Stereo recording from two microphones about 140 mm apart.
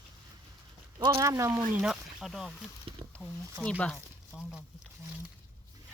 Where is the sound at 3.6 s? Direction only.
10° left (ahead or behind).